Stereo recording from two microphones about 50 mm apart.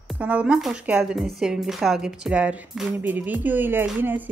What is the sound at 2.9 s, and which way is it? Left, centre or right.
Speech, right.